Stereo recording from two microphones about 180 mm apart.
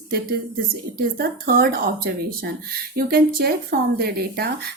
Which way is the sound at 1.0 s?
55° right (ahead or behind).